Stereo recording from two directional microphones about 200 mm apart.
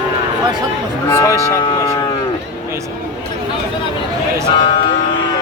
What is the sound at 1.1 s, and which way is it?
Speech, 15° left (ahead or behind).